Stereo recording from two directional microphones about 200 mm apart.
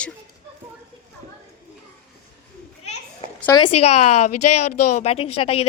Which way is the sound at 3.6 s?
35° left (ahead or behind).